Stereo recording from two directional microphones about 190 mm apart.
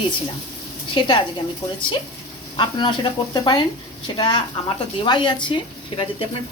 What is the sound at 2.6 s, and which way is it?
Speech, 25° left (ahead or behind).